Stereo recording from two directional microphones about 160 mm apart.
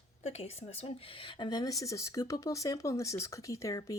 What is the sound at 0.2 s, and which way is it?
Speech, 40° left (ahead or behind).